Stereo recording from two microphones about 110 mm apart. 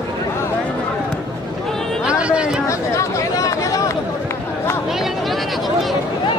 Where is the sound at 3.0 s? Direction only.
30° left (ahead or behind).